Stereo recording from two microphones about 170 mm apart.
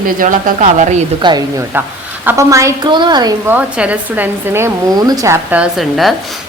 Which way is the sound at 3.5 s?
10° right (ahead or behind).